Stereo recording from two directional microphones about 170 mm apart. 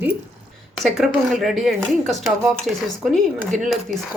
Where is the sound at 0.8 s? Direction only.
Centre (ahead or behind).